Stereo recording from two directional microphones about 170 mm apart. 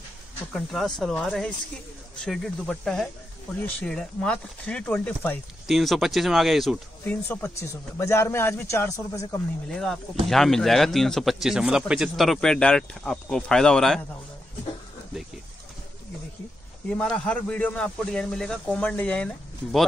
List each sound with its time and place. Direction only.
0.5 s speech: centre (ahead or behind)
5.7 s speech: centre (ahead or behind)
7.1 s speech: 15° left (ahead or behind)
9.7 s speech: 5° left (ahead or behind)
17.0 s speech: 5° left (ahead or behind)